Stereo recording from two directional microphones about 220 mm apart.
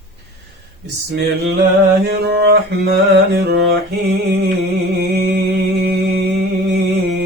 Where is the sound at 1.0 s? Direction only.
50° right (ahead or behind).